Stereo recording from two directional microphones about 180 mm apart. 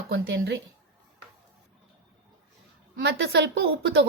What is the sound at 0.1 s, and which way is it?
Speech, 65° right (ahead or behind).